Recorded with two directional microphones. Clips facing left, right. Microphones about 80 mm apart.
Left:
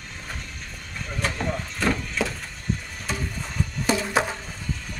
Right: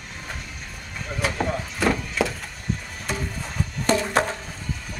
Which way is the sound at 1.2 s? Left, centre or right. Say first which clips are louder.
Right 3 dB; centre.